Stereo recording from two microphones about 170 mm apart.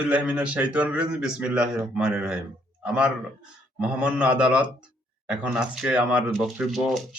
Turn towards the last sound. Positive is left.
turn(degrees=0)  # may be behind; listen again after turning